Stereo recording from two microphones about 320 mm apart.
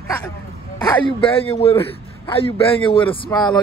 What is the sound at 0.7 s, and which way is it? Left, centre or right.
A man's voice, centre.